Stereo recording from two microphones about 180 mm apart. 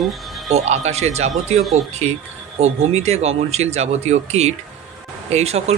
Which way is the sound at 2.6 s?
35° right (ahead or behind).